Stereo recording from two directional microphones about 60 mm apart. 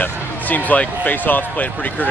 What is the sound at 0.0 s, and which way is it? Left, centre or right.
Speech, left.